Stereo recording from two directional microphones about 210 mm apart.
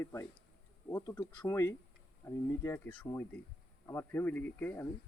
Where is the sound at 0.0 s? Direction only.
15° left (ahead or behind).